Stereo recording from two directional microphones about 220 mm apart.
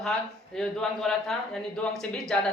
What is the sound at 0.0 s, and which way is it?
Speech, centre (ahead or behind).